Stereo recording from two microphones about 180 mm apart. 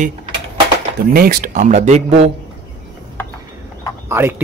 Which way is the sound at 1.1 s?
50° right (ahead or behind).